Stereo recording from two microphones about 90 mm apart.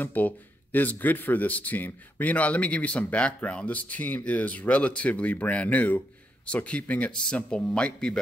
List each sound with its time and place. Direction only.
0.0 s speech: 20° left (ahead or behind)